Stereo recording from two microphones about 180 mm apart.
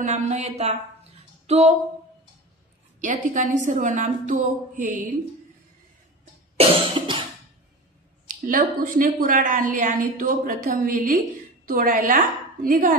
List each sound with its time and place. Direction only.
0.0 s speech: 40° right (ahead or behind)
3.0 s a woman's voice: 45° right (ahead or behind)
6.5 s cough: 35° right (ahead or behind)
8.5 s a woman's voice: 50° right (ahead or behind)